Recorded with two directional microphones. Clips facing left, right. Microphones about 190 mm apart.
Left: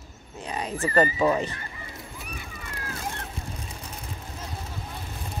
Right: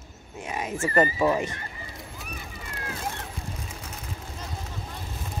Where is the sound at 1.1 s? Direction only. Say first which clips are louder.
Even; 5° right (ahead or behind).